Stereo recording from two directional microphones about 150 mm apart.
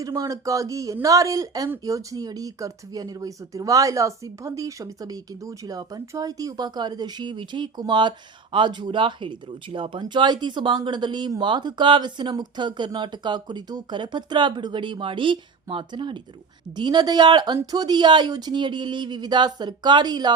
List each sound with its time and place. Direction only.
0.0 s speech: 25° right (ahead or behind)